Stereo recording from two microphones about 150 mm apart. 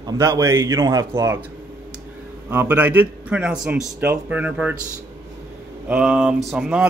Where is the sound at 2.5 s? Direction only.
15° right (ahead or behind).